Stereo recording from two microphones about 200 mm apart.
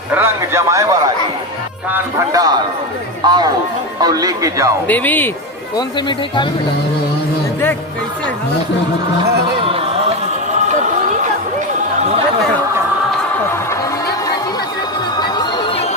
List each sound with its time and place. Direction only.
0.1 s a man's voice: 10° right (ahead or behind)
4.9 s speech: 10° left (ahead or behind)
5.7 s speech: 25° left (ahead or behind)
9.6 s music: 30° right (ahead or behind)
15.2 s chatter: 20° left (ahead or behind)